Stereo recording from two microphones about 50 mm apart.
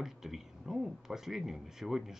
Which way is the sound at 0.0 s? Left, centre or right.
Centre.